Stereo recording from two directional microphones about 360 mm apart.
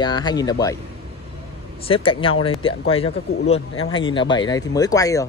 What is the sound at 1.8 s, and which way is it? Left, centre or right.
Speech, centre.